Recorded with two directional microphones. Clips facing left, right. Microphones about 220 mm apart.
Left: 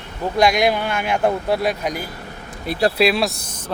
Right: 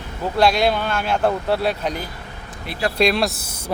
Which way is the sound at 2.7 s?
40° left (ahead or behind).